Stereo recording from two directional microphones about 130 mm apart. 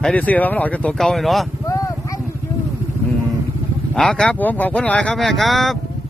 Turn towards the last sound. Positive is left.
turn(degrees=0)  # may be behind; listen again after turning